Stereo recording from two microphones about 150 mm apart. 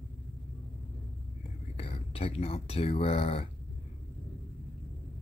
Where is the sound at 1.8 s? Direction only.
40° left (ahead or behind).